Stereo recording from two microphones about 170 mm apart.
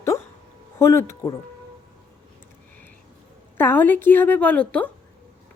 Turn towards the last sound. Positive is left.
turn(degrees=5)  # may be behind; listen again after turning